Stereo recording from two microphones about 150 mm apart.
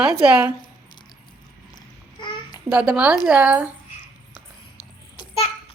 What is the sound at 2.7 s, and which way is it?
A woman's voice, 5° right (ahead or behind).